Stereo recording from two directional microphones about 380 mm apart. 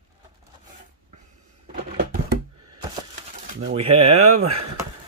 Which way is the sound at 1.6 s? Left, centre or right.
Right.